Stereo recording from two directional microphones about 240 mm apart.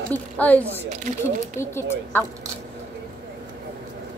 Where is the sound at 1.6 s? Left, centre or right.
Centre.